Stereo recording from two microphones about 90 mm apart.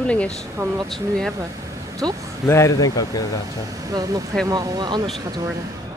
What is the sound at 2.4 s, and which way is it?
Speech, 30° left (ahead or behind).